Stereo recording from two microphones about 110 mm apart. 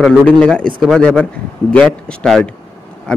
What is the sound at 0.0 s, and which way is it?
A man's voice, 5° left (ahead or behind).